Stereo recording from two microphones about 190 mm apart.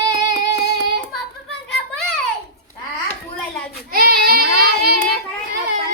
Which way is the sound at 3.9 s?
50° right (ahead or behind).